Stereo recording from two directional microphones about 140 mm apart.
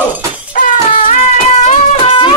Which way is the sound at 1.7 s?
45° left (ahead or behind).